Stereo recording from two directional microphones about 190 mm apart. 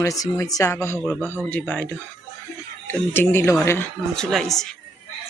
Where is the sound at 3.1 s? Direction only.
10° left (ahead or behind).